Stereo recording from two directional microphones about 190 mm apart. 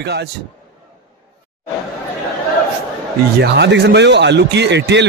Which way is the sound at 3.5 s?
60° right (ahead or behind).